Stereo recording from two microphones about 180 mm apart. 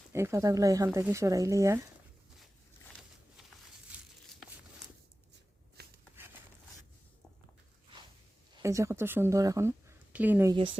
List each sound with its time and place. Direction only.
0.1 s speech: 15° right (ahead or behind)
5.8 s a sound: 60° right (ahead or behind)
8.6 s speech: 15° right (ahead or behind)